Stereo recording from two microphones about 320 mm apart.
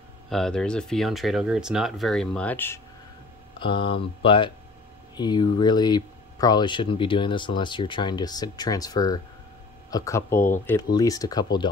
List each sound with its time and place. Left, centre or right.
0.3 s speech: centre